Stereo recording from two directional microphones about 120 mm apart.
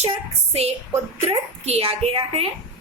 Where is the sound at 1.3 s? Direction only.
60° right (ahead or behind).